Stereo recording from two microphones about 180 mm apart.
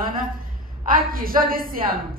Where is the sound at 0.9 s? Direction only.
55° right (ahead or behind).